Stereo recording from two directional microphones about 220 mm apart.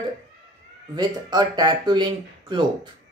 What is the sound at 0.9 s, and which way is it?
Speech, 20° right (ahead or behind).